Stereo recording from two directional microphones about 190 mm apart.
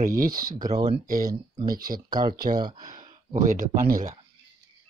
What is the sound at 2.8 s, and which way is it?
Speech, 45° right (ahead or behind).